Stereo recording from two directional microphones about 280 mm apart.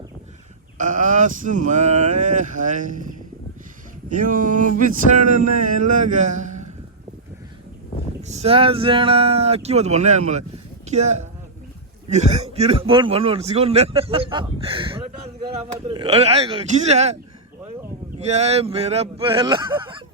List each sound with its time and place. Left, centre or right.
0.8 s a man's voice: right
4.1 s a man's voice: right
8.2 s a man's voice: right
18.2 s a man's voice: right